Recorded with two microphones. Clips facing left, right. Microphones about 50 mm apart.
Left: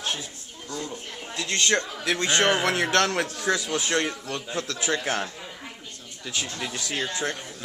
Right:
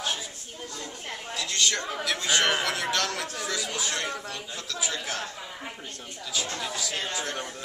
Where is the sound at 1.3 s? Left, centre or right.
Left.